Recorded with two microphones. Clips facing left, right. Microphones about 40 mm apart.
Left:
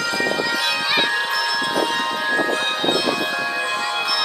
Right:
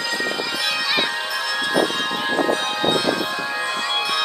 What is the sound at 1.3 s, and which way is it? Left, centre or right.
Bell, left.